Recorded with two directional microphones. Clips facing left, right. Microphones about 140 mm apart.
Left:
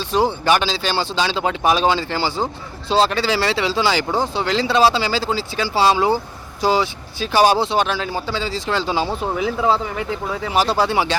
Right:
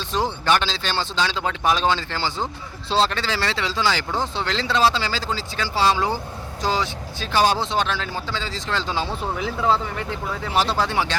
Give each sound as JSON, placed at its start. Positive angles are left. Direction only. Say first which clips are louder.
{"t": 0.2, "sound": "speech", "louder": "left 4 dB", "side_deg": 10}